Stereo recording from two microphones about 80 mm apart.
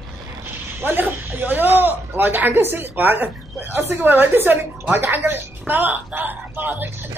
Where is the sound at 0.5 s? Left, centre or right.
Right.